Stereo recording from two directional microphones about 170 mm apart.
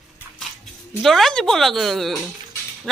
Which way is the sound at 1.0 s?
Centre (ahead or behind).